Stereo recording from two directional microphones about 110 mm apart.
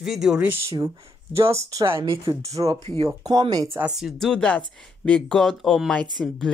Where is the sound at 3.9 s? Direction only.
Centre (ahead or behind).